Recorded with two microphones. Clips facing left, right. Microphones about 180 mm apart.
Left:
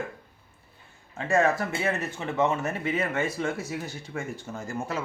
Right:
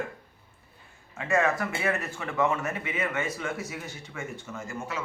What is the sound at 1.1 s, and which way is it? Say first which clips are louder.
A man's voice: left 2 dB; 30° left (ahead or behind).